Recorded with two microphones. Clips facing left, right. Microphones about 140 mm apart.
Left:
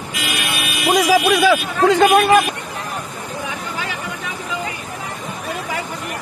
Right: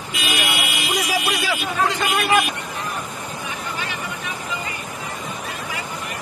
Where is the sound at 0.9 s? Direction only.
90° left.